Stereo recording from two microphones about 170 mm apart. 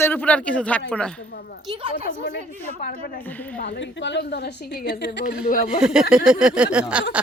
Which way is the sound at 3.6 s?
90° left.